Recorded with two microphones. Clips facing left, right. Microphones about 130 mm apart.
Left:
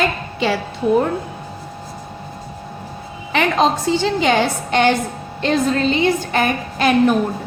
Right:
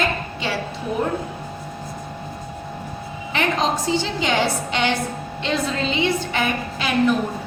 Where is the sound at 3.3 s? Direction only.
65° left (ahead or behind).